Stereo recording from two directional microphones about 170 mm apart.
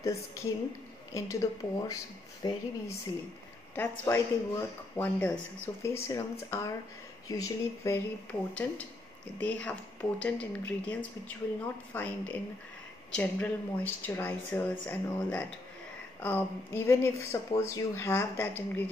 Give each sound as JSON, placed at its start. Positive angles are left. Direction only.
{"t": 0.0, "sound": "a woman's voice", "side_deg": 20}
{"t": 4.0, "sound": "speech", "side_deg": 15}